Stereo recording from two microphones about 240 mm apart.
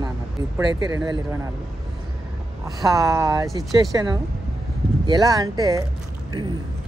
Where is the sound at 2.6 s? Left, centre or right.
Centre.